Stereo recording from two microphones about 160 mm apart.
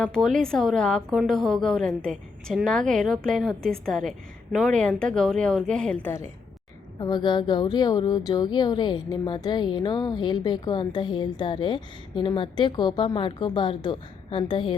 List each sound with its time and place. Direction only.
0.0 s speech: 5° left (ahead or behind)
7.0 s speech: 25° left (ahead or behind)